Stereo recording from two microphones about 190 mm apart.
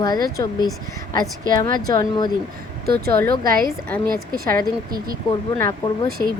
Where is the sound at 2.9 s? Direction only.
55° right (ahead or behind).